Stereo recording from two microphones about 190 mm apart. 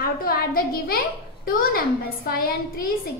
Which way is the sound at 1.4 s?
50° left (ahead or behind).